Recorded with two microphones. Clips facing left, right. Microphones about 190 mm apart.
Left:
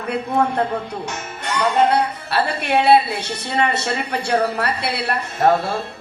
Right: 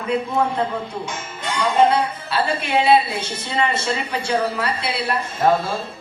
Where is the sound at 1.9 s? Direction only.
65° left (ahead or behind).